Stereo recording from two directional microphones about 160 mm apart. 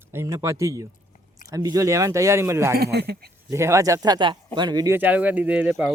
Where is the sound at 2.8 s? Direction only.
85° right.